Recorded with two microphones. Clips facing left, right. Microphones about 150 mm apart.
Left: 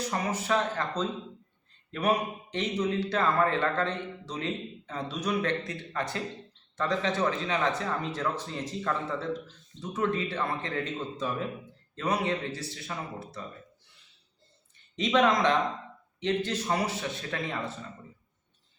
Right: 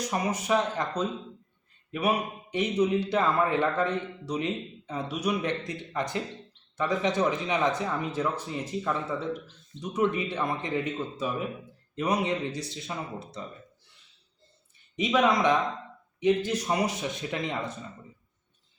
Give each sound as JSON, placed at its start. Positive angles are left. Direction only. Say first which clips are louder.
{"t": 0.1, "sound": "a man's voice", "louder": "right 3 dB", "side_deg": -15}
{"t": 14.9, "sound": "a man's voice", "louder": "even", "side_deg": -10}